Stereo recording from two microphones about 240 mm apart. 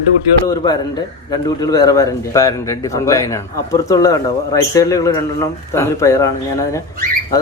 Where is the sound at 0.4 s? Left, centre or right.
Centre.